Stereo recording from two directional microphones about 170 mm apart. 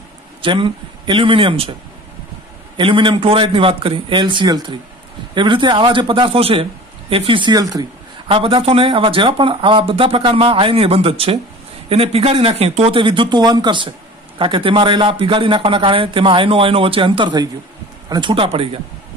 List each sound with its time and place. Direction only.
0.4 s a man's voice: 30° right (ahead or behind)
2.8 s a man's voice: 30° right (ahead or behind)